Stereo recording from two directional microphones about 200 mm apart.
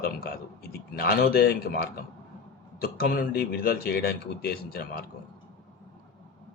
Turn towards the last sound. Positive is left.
turn(degrees=50)  # may be behind; listen again after turning